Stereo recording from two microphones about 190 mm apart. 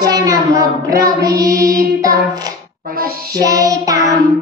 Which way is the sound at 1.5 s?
50° right (ahead or behind).